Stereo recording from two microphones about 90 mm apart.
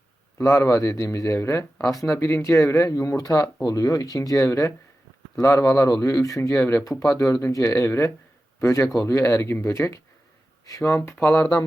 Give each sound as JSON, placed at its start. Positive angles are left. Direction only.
{"t": 0.3, "sound": "a man's voice", "side_deg": 35}